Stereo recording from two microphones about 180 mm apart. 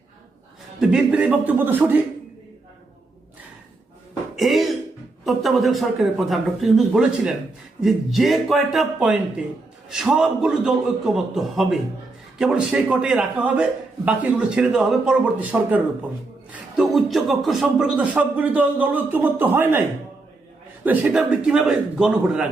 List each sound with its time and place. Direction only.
0.8 s speech: 5° right (ahead or behind)
4.4 s throat clearing: centre (ahead or behind)
5.2 s a man's voice: centre (ahead or behind)
20.8 s a man's voice: 10° right (ahead or behind)